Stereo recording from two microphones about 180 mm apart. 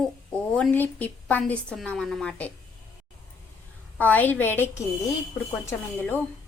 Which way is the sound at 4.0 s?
10° left (ahead or behind).